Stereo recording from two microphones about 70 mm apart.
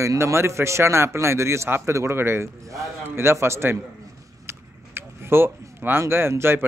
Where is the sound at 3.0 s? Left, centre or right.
Right.